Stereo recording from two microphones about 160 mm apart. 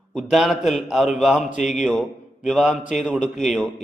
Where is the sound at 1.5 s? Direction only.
50° left (ahead or behind).